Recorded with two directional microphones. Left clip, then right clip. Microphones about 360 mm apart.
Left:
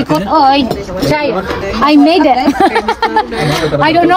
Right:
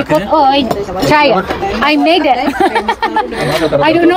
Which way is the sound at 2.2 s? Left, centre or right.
Left.